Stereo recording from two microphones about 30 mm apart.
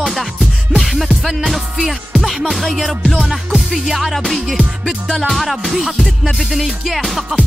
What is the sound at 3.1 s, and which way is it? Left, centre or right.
Music, right.